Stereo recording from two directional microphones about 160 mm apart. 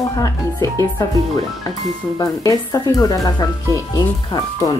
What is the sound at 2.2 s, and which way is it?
Speech, 20° left (ahead or behind).